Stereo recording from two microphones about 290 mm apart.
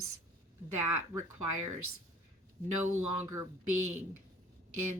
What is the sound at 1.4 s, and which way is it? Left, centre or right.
Speech, right.